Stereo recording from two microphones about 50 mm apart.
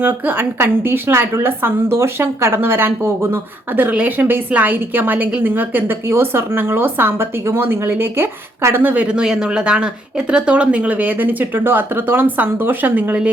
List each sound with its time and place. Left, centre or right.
0.0 s a woman's voice: right
8.8 s speech: right
9.0 s speech: centre
10.9 s speech: right